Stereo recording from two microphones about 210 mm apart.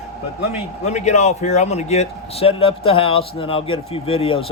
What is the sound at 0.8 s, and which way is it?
Speech, 35° left (ahead or behind).